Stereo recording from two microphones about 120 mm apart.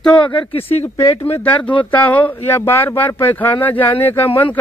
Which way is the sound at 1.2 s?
20° left (ahead or behind).